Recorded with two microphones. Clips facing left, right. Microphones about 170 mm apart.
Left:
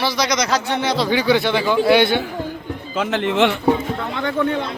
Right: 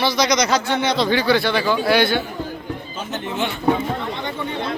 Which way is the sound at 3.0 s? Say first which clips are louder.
Left 9 dB; 90° left.